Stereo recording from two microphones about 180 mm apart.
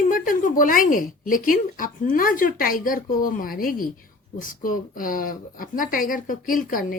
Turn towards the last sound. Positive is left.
turn(degrees=50)  # may be behind; listen again after turning